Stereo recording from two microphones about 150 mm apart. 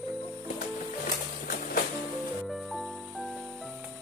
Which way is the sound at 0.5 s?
70° left (ahead or behind).